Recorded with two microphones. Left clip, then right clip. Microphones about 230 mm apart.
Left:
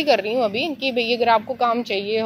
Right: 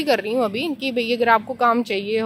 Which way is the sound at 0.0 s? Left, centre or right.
Right.